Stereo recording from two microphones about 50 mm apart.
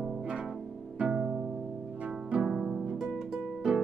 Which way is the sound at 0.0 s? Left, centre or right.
Centre.